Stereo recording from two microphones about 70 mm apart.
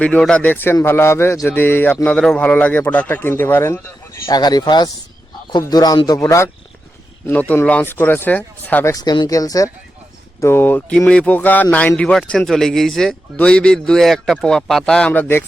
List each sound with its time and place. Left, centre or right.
0.0 s speech: centre
0.4 s speech: left
4.3 s speech: left
5.5 s speech: left
6.1 s speech: left
7.3 s speech: left
7.9 s speech: left
9.0 s speech: left
10.4 s speech: left
12.5 s speech: centre
15.1 s speech: left